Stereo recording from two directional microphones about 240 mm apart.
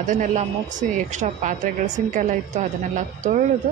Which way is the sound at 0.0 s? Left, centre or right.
Right.